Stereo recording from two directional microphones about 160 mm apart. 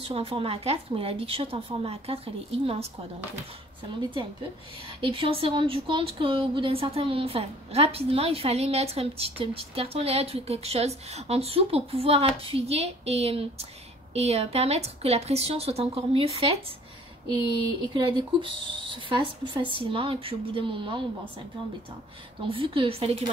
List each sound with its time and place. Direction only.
0.0 s speech: 35° right (ahead or behind)
4.8 s speech: 35° right (ahead or behind)
17.8 s speech: 30° right (ahead or behind)
22.5 s speech: 35° right (ahead or behind)